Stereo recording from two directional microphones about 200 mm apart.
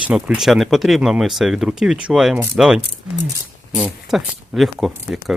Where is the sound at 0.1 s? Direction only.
5° right (ahead or behind).